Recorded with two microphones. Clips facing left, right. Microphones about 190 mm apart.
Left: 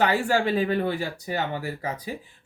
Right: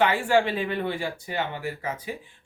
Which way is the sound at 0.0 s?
40° left (ahead or behind).